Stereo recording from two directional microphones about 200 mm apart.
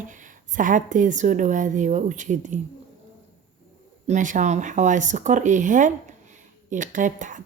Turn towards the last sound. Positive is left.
turn(degrees=-40)  # may be behind; listen again after turning